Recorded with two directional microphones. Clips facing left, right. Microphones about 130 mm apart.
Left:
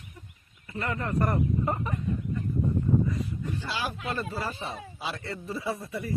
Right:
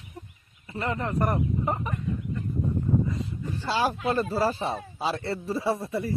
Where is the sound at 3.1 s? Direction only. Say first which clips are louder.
Even; 30° right (ahead or behind).